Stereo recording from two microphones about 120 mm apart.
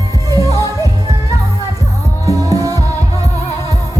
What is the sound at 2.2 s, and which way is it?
Music, 30° right (ahead or behind).